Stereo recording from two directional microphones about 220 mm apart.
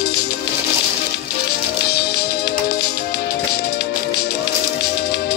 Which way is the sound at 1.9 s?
45° left (ahead or behind).